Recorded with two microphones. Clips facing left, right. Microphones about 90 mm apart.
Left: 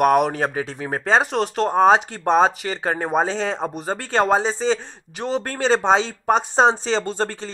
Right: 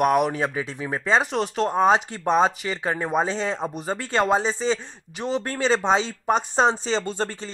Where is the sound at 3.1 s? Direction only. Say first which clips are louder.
Left 3 dB; 35° left (ahead or behind).